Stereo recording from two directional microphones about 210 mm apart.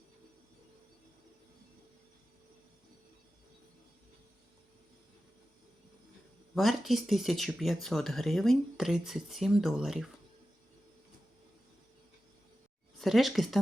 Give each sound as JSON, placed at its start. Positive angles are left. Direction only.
{"t": 6.5, "sound": "speech", "side_deg": 0}
{"t": 13.0, "sound": "speech", "side_deg": 0}